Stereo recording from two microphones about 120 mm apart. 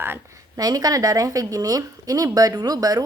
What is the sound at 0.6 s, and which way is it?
Speech, 30° right (ahead or behind).